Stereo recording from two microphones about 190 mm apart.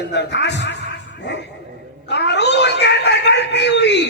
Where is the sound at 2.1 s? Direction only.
65° left (ahead or behind).